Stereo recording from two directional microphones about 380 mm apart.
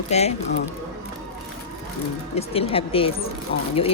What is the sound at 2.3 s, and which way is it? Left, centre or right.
Speech, centre.